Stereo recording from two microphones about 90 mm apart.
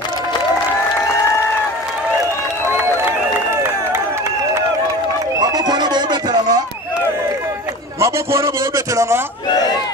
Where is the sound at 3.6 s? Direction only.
30° right (ahead or behind).